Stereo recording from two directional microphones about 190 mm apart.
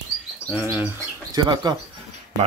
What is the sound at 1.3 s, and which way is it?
Speech, 20° right (ahead or behind).